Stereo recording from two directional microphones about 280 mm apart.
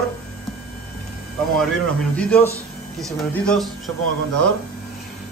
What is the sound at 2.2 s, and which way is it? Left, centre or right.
A man's voice, centre.